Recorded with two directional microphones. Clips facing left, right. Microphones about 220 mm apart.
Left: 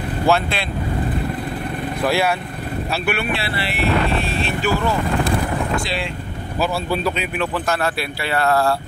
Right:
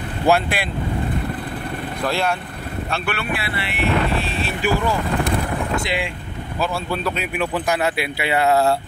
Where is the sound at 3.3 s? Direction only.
30° left (ahead or behind).